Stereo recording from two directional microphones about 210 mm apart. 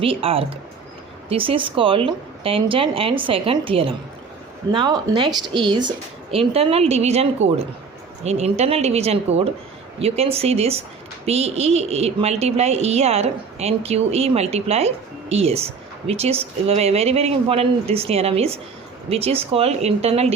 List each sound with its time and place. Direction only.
0.0 s a woman's voice: 25° right (ahead or behind)